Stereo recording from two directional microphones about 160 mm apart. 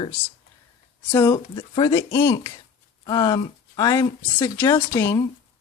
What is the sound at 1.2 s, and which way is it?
Speech, 25° left (ahead or behind).